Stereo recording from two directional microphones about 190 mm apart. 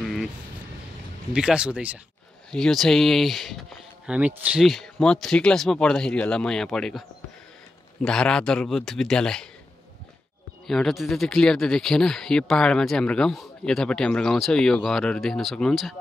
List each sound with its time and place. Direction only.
0.0 s vehicle: centre (ahead or behind)
1.3 s speech: 5° right (ahead or behind)
10.7 s speech: centre (ahead or behind)